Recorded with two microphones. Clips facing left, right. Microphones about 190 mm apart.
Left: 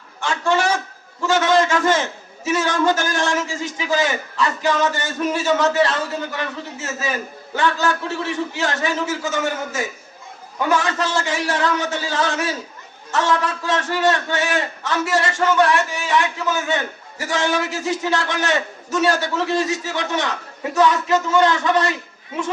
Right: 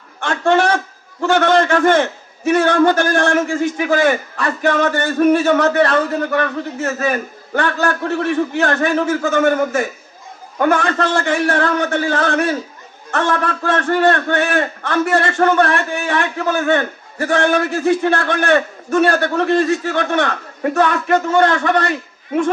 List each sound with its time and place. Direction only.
0.2 s a man's voice: 60° right (ahead or behind)